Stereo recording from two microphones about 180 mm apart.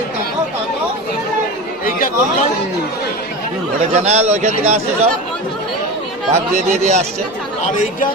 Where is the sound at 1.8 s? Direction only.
50° left (ahead or behind).